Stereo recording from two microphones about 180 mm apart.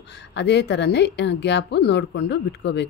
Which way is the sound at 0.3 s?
75° left (ahead or behind).